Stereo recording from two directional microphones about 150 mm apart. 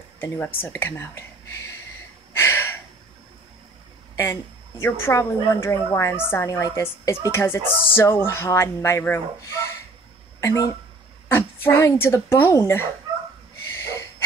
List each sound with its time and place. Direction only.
0.2 s speech: 15° left (ahead or behind)
2.3 s a sound: 15° left (ahead or behind)
4.2 s a woman's voice: 15° left (ahead or behind)